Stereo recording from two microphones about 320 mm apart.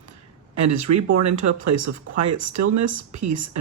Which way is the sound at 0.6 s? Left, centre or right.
Right.